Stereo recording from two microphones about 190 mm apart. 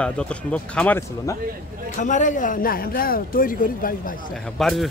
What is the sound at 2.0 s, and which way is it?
A man's voice, 40° left (ahead or behind).